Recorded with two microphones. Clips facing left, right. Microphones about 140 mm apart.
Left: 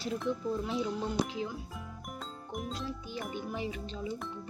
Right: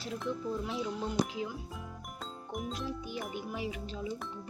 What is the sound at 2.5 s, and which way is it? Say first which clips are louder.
Music: right 1 dB; centre (ahead or behind).